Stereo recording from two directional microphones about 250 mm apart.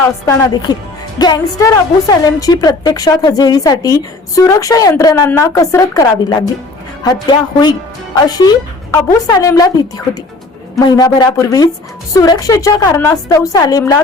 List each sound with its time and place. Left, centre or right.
0.3 s speech: centre
10.8 s speech: centre